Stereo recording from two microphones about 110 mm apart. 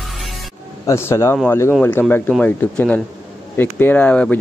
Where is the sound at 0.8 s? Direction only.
25° left (ahead or behind).